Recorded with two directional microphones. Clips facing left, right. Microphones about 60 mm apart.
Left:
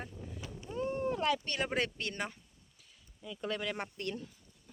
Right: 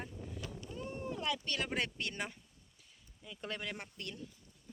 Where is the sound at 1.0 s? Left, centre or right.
Left.